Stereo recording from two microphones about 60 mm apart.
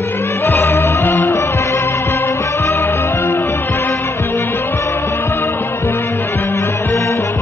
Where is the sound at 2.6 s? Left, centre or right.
Left.